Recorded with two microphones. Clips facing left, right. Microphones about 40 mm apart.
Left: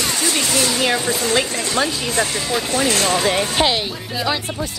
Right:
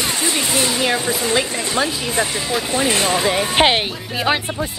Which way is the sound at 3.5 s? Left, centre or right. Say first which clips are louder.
Right 3 dB; right.